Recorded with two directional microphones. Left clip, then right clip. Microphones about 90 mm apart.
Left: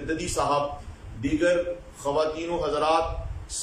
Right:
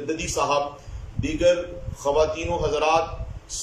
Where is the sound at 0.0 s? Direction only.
25° right (ahead or behind).